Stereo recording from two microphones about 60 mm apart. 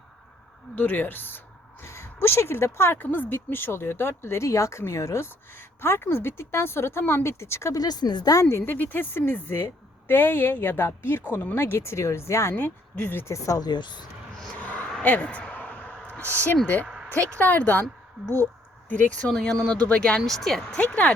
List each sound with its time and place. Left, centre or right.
0.8 s a woman's voice: left
1.8 s speech: left
3.0 s speech: left
7.8 s speech: left
8.4 s speech: left
8.7 s a woman's voice: left
12.5 s a woman's voice: left
13.2 s speech: left
14.6 s a sound: left
16.3 s speech: left
19.2 s speech: centre
20.2 s speech: centre
20.7 s speech: left